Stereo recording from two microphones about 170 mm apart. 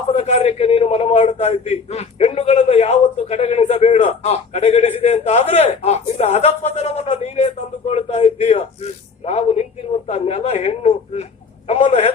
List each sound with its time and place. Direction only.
0.1 s a man's voice: 40° left (ahead or behind)